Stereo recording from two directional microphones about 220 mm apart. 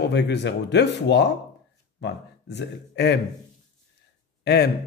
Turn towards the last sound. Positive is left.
turn(degrees=50)  # may be behind; listen again after turning